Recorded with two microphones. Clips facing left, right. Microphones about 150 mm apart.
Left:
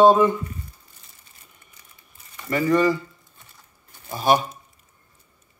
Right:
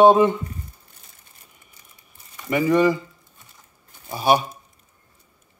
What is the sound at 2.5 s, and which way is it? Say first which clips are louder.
Speech: right 1 dB; 15° right (ahead or behind).